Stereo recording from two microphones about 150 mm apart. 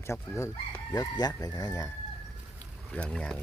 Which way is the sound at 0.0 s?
20° left (ahead or behind).